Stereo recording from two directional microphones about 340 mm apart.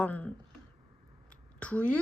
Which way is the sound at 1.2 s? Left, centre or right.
Centre.